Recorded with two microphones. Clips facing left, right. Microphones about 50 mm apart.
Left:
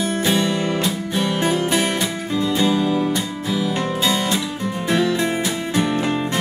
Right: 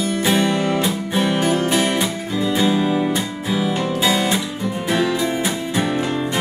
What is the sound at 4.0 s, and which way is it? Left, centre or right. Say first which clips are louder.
Guitar: right 3 dB; centre.